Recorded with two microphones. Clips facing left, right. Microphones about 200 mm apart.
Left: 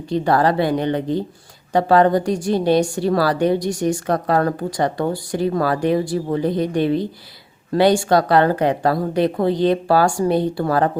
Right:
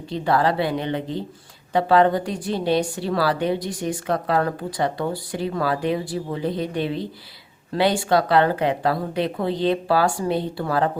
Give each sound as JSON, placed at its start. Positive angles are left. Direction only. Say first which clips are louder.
{"t": 0.1, "sound": "a woman's voice", "louder": "left 4 dB", "side_deg": 45}